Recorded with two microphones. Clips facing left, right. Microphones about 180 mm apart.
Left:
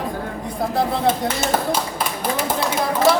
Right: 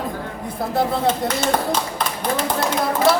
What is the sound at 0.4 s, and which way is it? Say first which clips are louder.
Speech: even; centre (ahead or behind).